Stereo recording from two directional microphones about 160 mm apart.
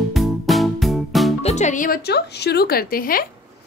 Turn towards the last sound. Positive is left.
turn(degrees=65)  # may be behind; listen again after turning